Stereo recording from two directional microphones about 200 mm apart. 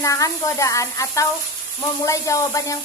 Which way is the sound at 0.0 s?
15° left (ahead or behind).